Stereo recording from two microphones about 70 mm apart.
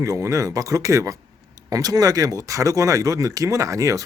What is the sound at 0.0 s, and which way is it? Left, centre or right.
Speech, right.